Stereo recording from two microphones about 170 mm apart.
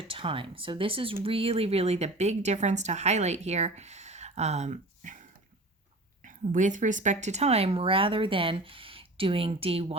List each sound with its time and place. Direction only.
0.1 s speech: 30° right (ahead or behind)
6.2 s speech: 50° right (ahead or behind)